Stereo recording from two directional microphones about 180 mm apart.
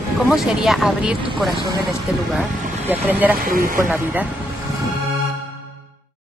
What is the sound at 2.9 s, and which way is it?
Speech, 10° right (ahead or behind).